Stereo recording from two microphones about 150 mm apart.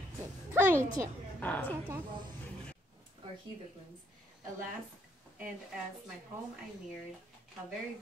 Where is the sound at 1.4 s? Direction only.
10° left (ahead or behind).